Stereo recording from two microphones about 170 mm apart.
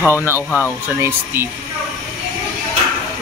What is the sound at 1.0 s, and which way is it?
Speech, 15° right (ahead or behind).